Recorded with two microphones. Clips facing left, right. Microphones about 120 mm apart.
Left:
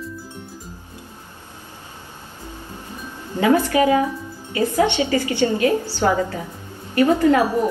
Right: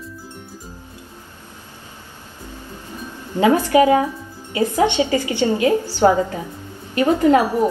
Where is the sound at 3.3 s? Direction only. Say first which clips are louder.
Right 2 dB; 15° right (ahead or behind).